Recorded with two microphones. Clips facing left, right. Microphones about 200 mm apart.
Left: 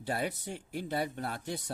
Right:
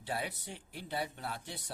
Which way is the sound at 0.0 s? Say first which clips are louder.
Left 5 dB; 45° left (ahead or behind).